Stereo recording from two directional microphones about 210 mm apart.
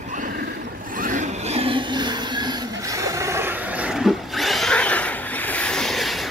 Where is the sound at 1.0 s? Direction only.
35° right (ahead or behind); by 6.3 s centre (ahead or behind).